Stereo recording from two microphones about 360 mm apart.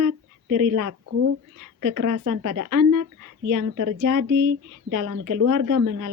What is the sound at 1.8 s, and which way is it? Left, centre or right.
Speech, right.